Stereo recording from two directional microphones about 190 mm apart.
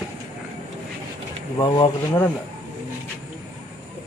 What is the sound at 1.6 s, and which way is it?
Speech, 25° left (ahead or behind).